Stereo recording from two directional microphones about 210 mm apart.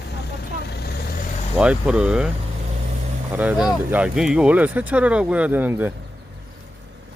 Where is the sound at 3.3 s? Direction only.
5° right (ahead or behind).